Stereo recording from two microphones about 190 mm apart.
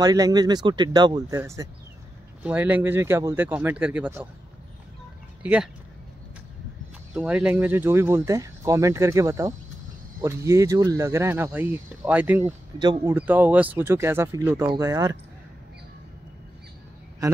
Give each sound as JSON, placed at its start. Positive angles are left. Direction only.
{"t": 0.0, "sound": "speech", "side_deg": -20}
{"t": 5.4, "sound": "speech", "side_deg": -5}
{"t": 7.2, "sound": "speech", "side_deg": -5}
{"t": 12.7, "sound": "speech", "side_deg": -20}
{"t": 13.1, "sound": "speech", "side_deg": -10}
{"t": 17.2, "sound": "a man's voice", "side_deg": -20}